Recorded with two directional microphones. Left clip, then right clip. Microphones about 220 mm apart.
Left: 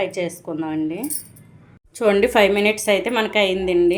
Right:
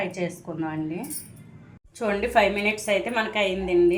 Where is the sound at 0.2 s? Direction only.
40° left (ahead or behind).